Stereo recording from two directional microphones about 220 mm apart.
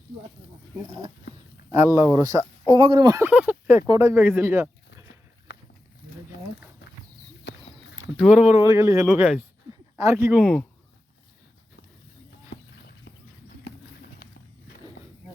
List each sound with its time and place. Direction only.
1.7 s speech: 15° right (ahead or behind)
7.4 s a sound: 55° left (ahead or behind)
8.1 s speech: 5° right (ahead or behind)
10.4 s speech: 5° left (ahead or behind)
13.7 s horse: 45° left (ahead or behind)